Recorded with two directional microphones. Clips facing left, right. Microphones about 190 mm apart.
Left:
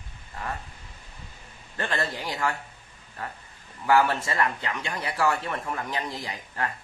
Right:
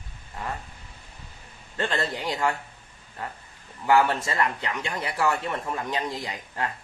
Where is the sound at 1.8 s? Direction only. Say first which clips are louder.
Right 2 dB; 20° right (ahead or behind).